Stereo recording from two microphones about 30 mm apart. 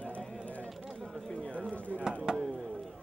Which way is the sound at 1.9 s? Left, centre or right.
Left.